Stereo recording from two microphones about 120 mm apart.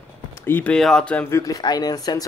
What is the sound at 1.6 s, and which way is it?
Speech, 35° left (ahead or behind).